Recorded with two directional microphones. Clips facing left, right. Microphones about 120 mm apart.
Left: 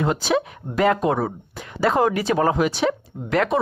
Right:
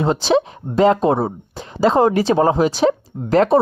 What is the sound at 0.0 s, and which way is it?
Speech, 30° right (ahead or behind).